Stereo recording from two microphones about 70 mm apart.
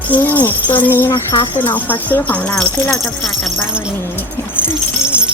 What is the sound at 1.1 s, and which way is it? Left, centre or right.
Speech, left.